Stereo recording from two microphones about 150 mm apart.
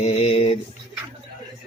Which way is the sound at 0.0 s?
40° left (ahead or behind).